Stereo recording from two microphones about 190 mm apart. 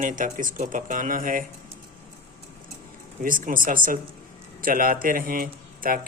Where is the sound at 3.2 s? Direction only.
45° right (ahead or behind).